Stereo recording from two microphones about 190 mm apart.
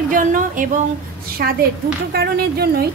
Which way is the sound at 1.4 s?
55° right (ahead or behind).